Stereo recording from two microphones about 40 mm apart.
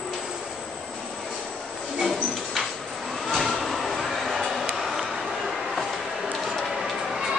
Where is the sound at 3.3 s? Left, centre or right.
Centre.